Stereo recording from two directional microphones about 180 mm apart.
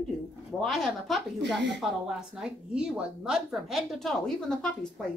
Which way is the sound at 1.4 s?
75° right (ahead or behind).